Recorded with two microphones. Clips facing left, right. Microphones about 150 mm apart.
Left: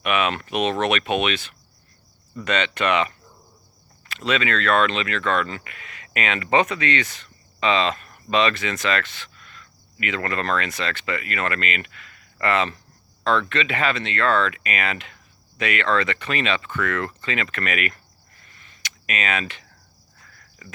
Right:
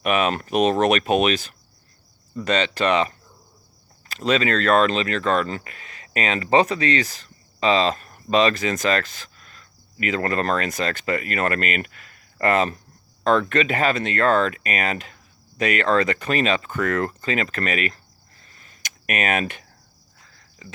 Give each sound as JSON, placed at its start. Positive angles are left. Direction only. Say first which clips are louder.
{"t": 0.0, "sound": "speech", "louder": "right 2 dB", "side_deg": -40}
{"t": 18.4, "sound": "a sound", "louder": "left 1 dB", "side_deg": -40}
{"t": 20.2, "sound": "cricket", "louder": "right 2 dB", "side_deg": -25}